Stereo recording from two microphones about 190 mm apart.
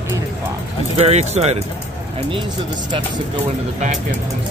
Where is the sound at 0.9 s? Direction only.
35° right (ahead or behind).